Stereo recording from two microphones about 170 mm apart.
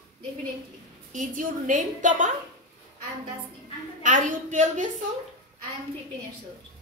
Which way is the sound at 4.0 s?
50° right (ahead or behind).